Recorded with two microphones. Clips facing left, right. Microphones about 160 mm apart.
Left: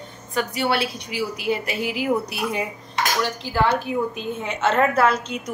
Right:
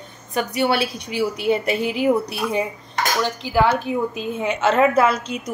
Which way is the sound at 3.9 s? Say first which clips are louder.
Right 1 dB; 25° right (ahead or behind).